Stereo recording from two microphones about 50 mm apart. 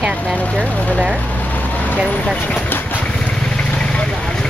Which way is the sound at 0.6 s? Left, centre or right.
Left.